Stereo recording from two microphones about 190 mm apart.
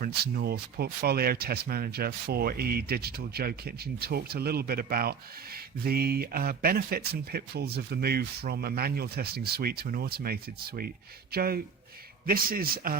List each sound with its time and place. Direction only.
0.0 s speech: 55° right (ahead or behind)